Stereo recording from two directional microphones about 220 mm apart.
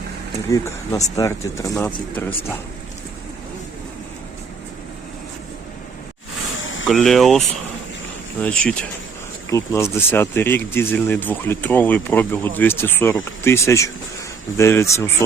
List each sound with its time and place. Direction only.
0.5 s speech: 15° left (ahead or behind)
6.6 s a sound: 60° left (ahead or behind)
6.8 s speech: centre (ahead or behind)